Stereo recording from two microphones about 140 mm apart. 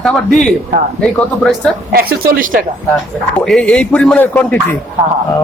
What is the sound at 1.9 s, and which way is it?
Speech, 90° right.